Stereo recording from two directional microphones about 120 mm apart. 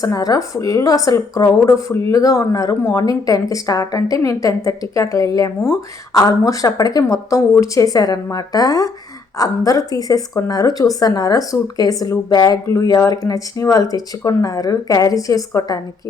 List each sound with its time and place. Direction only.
0.0 s a woman's voice: 30° left (ahead or behind)